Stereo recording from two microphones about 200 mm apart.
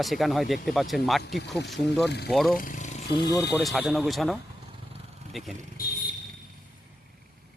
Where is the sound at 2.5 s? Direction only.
40° left (ahead or behind).